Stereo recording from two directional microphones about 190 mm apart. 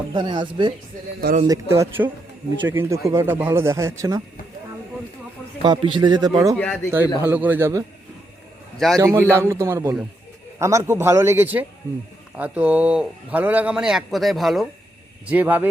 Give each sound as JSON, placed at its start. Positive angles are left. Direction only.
{"t": 0.1, "sound": "a man's voice", "side_deg": -25}
{"t": 5.6, "sound": "a man's voice", "side_deg": -25}
{"t": 6.6, "sound": "speech", "side_deg": 10}
{"t": 7.2, "sound": "speech", "side_deg": -10}
{"t": 9.0, "sound": "a man's voice", "side_deg": -15}